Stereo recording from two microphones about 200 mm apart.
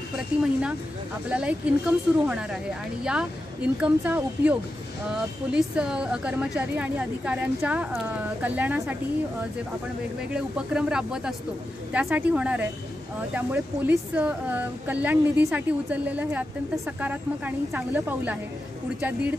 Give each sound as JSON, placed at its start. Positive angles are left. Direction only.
{"t": 0.1, "sound": "speech", "side_deg": -5}
{"t": 10.3, "sound": "speech", "side_deg": -5}